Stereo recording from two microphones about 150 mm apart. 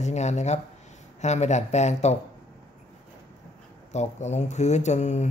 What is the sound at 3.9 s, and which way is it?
Speech, 50° left (ahead or behind).